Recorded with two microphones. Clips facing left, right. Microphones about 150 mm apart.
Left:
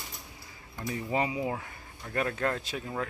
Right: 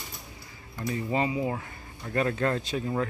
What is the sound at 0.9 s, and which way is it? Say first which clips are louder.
Speech: right 2 dB; 15° left (ahead or behind).